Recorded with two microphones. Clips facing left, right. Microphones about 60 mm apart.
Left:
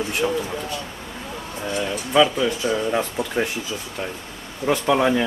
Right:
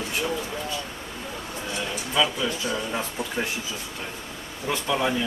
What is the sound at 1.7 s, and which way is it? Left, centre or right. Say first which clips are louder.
Speech: left 7 dB; left.